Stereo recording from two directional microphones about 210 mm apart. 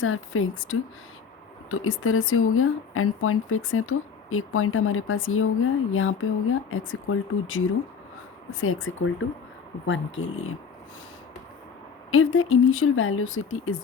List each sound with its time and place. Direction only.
0.0 s speech: 75° left (ahead or behind)
8.6 s speech: 70° left (ahead or behind)
12.1 s speech: 80° left